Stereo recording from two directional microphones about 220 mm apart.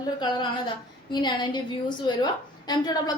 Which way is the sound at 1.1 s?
20° left (ahead or behind).